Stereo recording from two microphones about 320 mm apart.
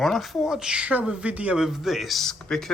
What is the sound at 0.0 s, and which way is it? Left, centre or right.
Speech, centre.